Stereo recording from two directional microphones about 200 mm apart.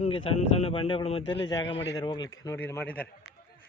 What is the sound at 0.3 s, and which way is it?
Speech, 30° left (ahead or behind).